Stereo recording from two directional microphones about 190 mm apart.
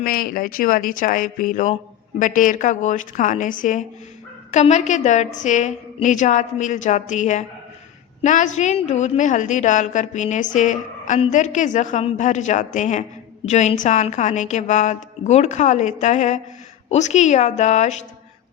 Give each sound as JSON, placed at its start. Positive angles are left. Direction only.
{"t": 0.0, "sound": "a woman's voice", "side_deg": 50}